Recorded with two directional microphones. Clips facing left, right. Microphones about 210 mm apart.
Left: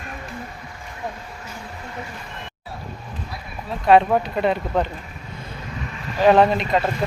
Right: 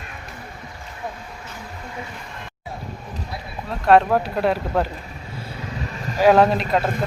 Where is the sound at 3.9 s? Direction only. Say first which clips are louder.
Even; centre (ahead or behind).